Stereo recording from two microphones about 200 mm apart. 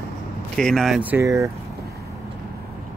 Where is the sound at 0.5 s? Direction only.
Centre (ahead or behind); by 1.5 s 15° right (ahead or behind).